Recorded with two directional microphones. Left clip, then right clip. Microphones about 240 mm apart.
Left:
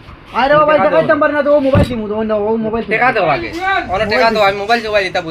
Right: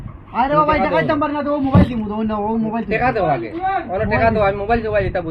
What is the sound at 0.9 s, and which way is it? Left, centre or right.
Speech, right.